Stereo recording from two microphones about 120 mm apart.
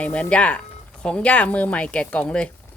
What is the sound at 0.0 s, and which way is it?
Speech, 10° left (ahead or behind).